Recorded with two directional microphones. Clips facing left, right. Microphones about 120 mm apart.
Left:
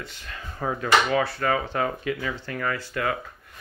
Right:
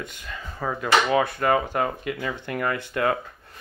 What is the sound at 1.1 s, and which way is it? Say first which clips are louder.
Speech: right 3 dB; 20° right (ahead or behind).